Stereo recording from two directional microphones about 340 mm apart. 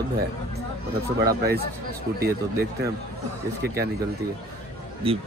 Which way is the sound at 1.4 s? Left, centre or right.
Right.